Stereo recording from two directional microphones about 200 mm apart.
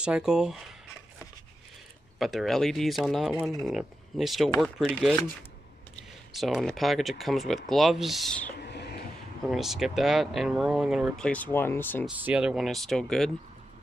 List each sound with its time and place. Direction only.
0.0 s speech: 5° right (ahead or behind)
2.1 s speech: centre (ahead or behind)
6.3 s speech: centre (ahead or behind)
8.6 s a sound: 55° left (ahead or behind)
9.5 s speech: centre (ahead or behind)
12.2 s speech: 5° right (ahead or behind)